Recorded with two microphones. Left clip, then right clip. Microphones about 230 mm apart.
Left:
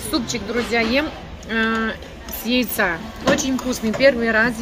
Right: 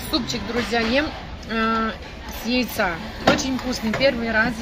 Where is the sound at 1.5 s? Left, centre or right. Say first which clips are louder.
Left 1 dB; centre.